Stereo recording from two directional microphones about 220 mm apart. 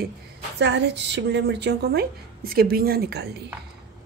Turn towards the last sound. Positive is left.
turn(degrees=-45)  # may be behind; listen again after turning